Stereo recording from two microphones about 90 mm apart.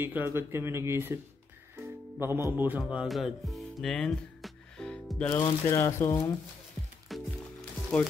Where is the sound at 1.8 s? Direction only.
25° right (ahead or behind).